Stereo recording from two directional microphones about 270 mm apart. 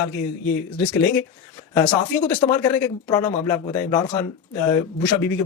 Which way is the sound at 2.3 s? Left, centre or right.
Centre.